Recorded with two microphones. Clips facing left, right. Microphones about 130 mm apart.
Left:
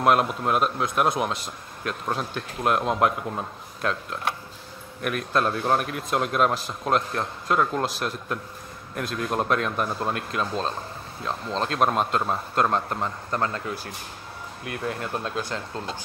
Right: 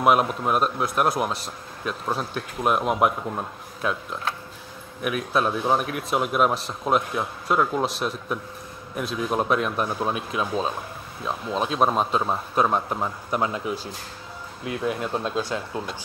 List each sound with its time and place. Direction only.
0.0 s a man's voice: 5° right (ahead or behind); by 15.4 s 20° right (ahead or behind)